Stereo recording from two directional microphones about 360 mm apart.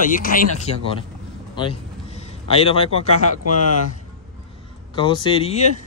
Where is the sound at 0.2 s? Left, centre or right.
Left.